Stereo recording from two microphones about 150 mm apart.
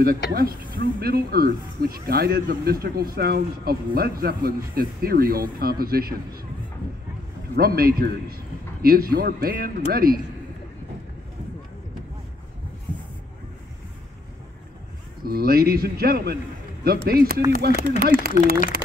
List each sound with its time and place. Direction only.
0.3 s speech: 90° right
7.5 s speech: 90° right
15.2 s speech: 90° right